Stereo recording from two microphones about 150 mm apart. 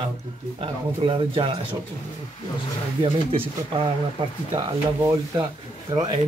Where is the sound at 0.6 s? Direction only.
35° right (ahead or behind).